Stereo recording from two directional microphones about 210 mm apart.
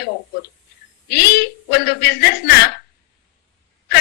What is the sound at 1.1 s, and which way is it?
A woman's voice, 50° left (ahead or behind).